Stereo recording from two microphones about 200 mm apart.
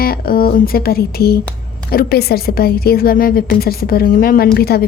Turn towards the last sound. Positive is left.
turn(degrees=50)  # may be behind; listen again after turning